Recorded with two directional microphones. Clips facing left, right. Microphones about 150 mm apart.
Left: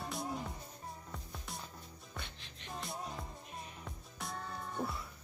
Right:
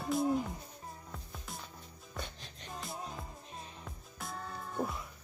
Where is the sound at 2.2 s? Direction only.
40° right (ahead or behind).